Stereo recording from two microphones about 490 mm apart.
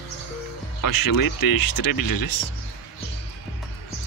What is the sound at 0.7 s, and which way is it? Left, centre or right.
Speech, left.